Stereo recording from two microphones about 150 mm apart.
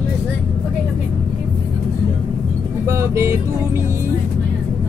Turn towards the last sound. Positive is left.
turn(degrees=-20)  # may be behind; listen again after turning